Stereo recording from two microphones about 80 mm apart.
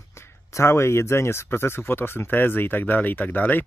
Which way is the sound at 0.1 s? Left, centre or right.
Left.